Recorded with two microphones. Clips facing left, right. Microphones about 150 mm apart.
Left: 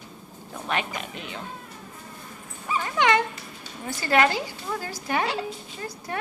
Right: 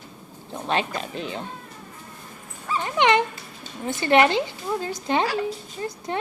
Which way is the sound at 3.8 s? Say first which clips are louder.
Right 4 dB; 25° right (ahead or behind).